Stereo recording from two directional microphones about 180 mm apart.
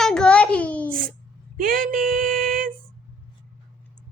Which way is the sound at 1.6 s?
50° right (ahead or behind).